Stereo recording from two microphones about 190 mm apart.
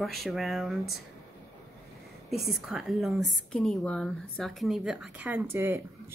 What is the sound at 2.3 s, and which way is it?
A woman's voice, centre (ahead or behind).